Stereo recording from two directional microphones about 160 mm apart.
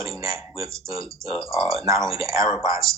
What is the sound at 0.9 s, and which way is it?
Speech, centre (ahead or behind).